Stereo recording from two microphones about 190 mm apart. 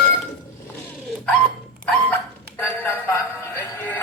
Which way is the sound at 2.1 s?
10° left (ahead or behind).